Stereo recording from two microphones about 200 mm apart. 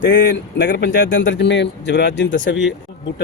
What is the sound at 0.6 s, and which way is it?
Speech, 60° left (ahead or behind).